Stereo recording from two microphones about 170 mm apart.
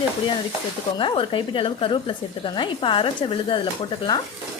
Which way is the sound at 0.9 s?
30° left (ahead or behind).